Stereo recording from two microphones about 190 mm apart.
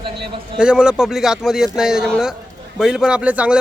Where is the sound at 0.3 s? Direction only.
25° right (ahead or behind).